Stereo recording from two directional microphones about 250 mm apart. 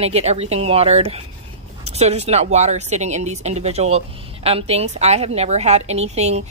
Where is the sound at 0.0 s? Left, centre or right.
Right.